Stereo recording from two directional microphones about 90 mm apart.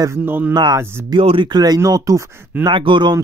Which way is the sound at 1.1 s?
70° right (ahead or behind).